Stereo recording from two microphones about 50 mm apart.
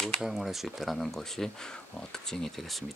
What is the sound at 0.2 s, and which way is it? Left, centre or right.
Speech, centre.